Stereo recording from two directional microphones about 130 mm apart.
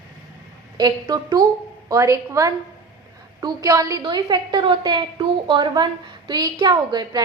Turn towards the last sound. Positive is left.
turn(degrees=-30)  # may be behind; listen again after turning